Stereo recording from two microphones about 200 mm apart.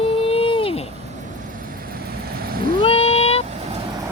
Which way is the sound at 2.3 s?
45° right (ahead or behind).